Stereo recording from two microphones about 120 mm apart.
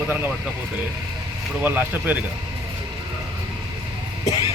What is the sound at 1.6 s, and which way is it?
Speech, 15° right (ahead or behind).